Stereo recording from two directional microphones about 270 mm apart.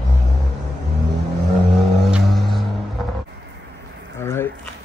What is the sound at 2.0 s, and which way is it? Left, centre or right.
Music, centre.